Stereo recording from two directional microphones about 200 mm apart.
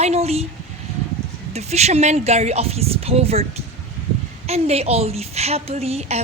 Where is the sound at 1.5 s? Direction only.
35° right (ahead or behind).